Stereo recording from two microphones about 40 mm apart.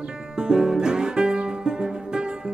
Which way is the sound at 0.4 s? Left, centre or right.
Centre.